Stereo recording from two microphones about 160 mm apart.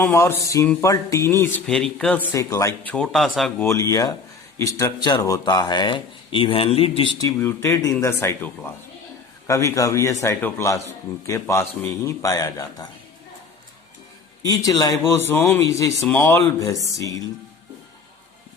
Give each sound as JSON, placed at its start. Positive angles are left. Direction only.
{"t": 0.0, "sound": "a man's voice", "side_deg": 15}
{"t": 1.6, "sound": "a man's voice", "side_deg": 5}
{"t": 2.9, "sound": "speech", "side_deg": 5}
{"t": 3.6, "sound": "a man's voice", "side_deg": 20}
{"t": 14.4, "sound": "a man's voice", "side_deg": 20}